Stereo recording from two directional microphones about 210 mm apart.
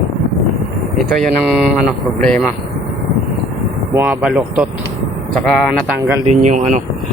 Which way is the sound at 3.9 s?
10° right (ahead or behind).